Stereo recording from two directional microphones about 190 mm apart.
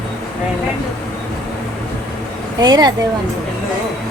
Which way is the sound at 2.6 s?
20° right (ahead or behind).